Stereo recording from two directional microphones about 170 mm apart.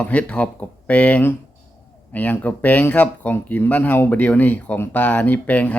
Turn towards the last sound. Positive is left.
turn(degrees=10)  # may be behind; listen again after turning